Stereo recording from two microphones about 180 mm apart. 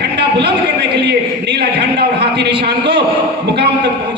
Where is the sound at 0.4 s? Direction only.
70° right (ahead or behind).